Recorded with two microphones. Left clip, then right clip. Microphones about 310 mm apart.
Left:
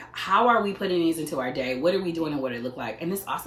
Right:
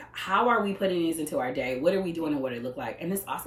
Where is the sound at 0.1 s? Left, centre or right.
Centre.